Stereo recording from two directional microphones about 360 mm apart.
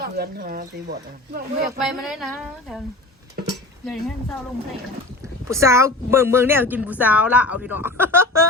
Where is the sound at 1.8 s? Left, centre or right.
Centre.